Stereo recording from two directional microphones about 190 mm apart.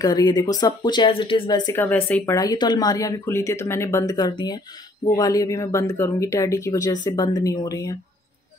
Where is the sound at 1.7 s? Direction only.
10° left (ahead or behind).